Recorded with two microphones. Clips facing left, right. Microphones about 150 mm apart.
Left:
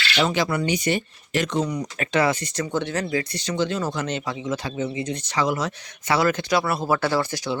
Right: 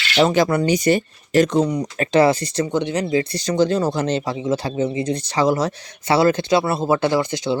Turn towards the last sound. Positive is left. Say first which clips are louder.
# right 4 dB
turn(degrees=-20)  # may be behind; listen again after turning